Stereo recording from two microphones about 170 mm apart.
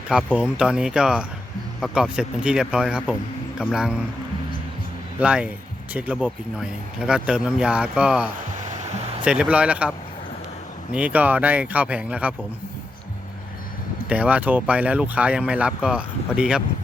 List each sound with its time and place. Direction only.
0.1 s speech: 5° right (ahead or behind)
5.2 s speech: 5° right (ahead or behind)
8.5 s music: 45° right (ahead or behind)
9.2 s speech: 5° right (ahead or behind)
10.9 s speech: 10° right (ahead or behind)
14.1 s speech: 10° right (ahead or behind)